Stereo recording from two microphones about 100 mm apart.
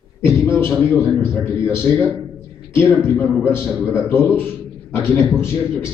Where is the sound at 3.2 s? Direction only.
20° left (ahead or behind).